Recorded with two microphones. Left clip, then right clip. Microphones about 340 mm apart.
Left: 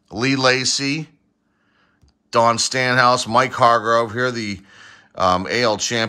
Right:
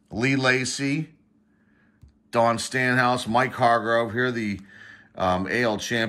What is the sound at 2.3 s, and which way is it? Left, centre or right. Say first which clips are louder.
Speech: left 6 dB; centre.